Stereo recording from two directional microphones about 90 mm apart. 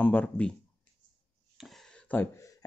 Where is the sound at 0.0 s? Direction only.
20° left (ahead or behind).